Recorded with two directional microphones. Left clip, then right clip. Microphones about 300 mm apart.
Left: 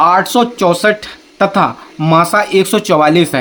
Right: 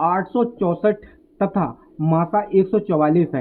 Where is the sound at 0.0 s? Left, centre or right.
Centre.